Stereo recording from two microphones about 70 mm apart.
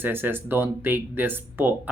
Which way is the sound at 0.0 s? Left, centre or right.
Right.